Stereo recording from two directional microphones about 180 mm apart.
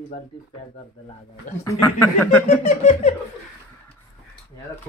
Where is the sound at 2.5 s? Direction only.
45° left (ahead or behind).